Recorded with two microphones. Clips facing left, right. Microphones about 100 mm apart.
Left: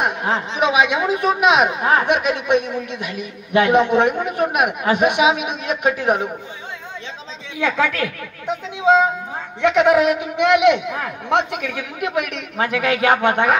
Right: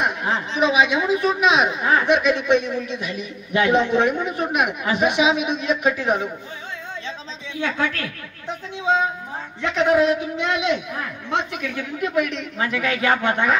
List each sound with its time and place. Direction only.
0.0 s a woman's voice: 50° left (ahead or behind)
7.6 s a woman's voice: 90° left; by 13.6 s 60° left (ahead or behind)